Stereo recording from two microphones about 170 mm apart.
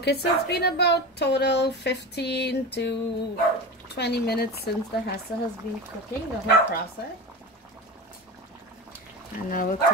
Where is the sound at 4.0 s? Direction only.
70° left (ahead or behind).